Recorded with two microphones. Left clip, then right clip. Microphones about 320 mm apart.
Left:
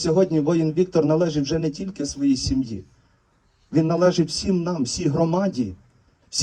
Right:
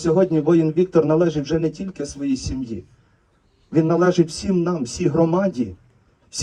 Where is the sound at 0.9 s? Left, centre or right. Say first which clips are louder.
Right 3 dB; centre.